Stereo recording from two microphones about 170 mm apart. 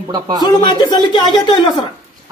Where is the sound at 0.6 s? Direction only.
25° left (ahead or behind).